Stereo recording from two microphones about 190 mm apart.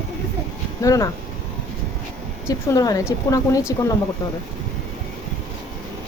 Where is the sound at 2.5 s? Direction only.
20° left (ahead or behind).